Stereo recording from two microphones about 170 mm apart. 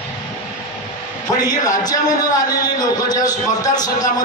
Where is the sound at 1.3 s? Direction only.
20° left (ahead or behind).